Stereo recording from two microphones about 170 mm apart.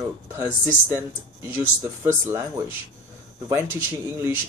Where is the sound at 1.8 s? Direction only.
15° right (ahead or behind).